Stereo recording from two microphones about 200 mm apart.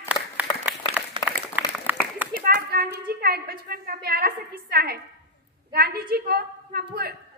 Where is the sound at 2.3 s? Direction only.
50° right (ahead or behind).